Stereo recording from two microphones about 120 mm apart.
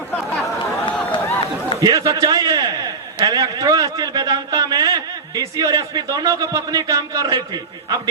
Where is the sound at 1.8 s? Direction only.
30° right (ahead or behind).